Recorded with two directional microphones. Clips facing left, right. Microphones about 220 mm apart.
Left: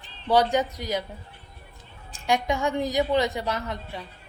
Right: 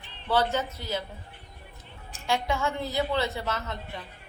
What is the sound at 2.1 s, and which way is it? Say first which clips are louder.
A woman's voice: left 3 dB; 15° left (ahead or behind).